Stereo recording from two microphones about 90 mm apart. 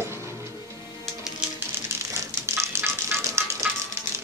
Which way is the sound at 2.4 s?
30° right (ahead or behind).